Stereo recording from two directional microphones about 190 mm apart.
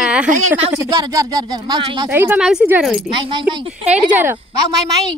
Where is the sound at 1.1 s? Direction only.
20° right (ahead or behind).